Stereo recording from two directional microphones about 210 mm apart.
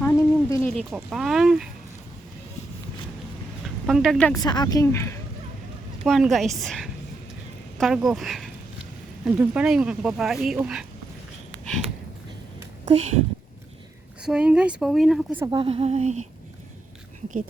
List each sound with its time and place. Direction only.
0.0 s a sound: 15° left (ahead or behind)
0.7 s speech: centre (ahead or behind)
3.8 s speech: centre (ahead or behind)
4.4 s a woman's voice: 20° left (ahead or behind)
6.1 s speech: centre (ahead or behind)
12.8 s speech: 35° right (ahead or behind)
14.3 s speech: 5° right (ahead or behind)
15.4 s speech: 25° right (ahead or behind)